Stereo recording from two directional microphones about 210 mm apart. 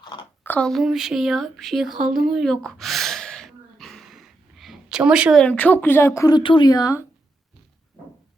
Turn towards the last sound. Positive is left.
turn(degrees=20)  # may be behind; listen again after turning